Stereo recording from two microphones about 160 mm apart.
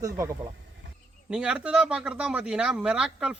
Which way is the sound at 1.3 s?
5° right (ahead or behind).